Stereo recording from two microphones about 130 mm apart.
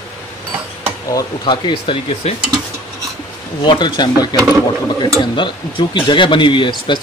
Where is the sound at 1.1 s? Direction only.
30° left (ahead or behind).